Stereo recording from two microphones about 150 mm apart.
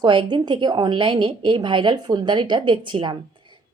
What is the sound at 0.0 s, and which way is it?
A woman's voice, 30° right (ahead or behind).